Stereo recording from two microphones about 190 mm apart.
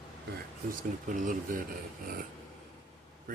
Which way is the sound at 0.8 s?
45° right (ahead or behind).